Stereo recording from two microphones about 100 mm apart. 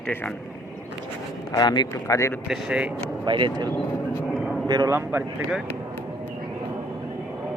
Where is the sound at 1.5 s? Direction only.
45° left (ahead or behind).